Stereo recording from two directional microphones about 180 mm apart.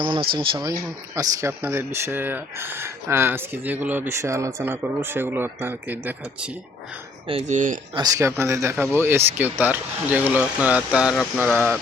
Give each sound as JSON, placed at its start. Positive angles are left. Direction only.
{"t": 0.0, "sound": "a sound", "side_deg": -25}
{"t": 0.3, "sound": "speech", "side_deg": -20}
{"t": 7.3, "sound": "speech", "side_deg": -35}
{"t": 7.9, "sound": "speech", "side_deg": -20}